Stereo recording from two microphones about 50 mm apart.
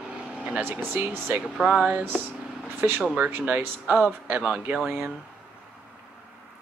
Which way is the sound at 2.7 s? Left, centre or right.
Right.